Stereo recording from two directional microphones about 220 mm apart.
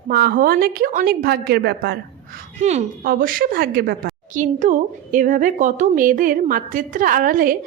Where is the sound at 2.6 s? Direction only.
30° right (ahead or behind).